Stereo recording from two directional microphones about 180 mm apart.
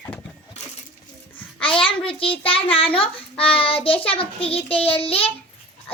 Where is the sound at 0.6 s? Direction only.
40° left (ahead or behind).